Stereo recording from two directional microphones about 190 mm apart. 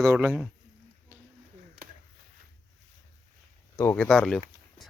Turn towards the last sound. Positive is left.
turn(degrees=5)  # may be behind; listen again after turning